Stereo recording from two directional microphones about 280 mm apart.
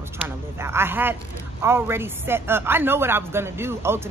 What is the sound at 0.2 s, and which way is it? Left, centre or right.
Speech, centre.